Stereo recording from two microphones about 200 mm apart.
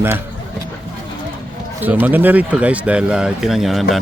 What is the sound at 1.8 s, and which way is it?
Speech, 10° right (ahead or behind).